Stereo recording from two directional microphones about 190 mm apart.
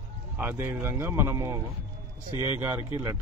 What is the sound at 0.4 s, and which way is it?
A man's voice, 10° right (ahead or behind).